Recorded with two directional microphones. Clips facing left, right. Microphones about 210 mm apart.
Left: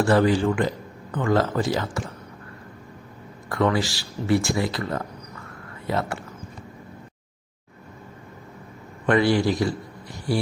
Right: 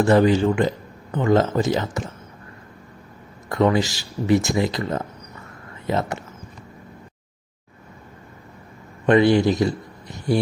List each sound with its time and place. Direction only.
0.0 s speech: 20° right (ahead or behind)
3.5 s speech: 20° right (ahead or behind)
9.0 s a man's voice: 20° right (ahead or behind)